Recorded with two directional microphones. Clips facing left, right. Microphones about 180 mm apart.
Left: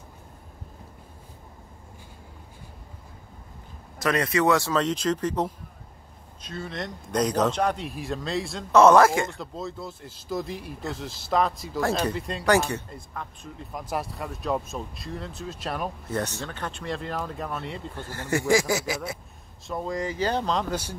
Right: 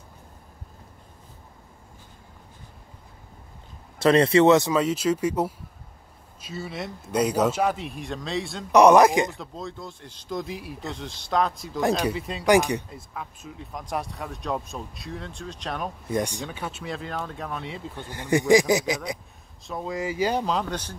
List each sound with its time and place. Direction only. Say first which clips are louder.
4.0 s speech: right 6 dB; 30° right (ahead or behind)
4.7 s speech: right 2 dB; 10° right (ahead or behind)
8.7 s speech: right 1 dB; 15° right (ahead or behind)
9.3 s speech: left 1 dB; centre (ahead or behind)
12.4 s speech: right 3 dB; 15° right (ahead or behind)
12.9 s speech: even; 5° right (ahead or behind)
16.1 s speech: right 5 dB; 15° right (ahead or behind)
17.9 s speech: right 4 dB; 15° right (ahead or behind)
19.6 s speech: even; centre (ahead or behind)
20.6 s speech: left 2 dB; 10° left (ahead or behind)